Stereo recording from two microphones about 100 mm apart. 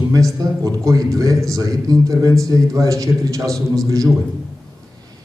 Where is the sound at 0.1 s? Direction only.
35° right (ahead or behind).